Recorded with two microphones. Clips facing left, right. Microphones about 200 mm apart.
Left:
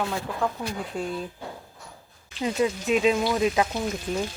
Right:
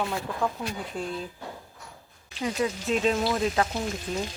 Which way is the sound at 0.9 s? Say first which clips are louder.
Left 3 dB; centre (ahead or behind).